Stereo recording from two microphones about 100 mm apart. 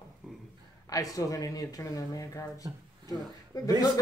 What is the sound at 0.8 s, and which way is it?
A woman's voice, 35° left (ahead or behind).